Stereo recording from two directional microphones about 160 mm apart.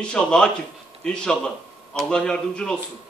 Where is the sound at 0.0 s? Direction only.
5° left (ahead or behind).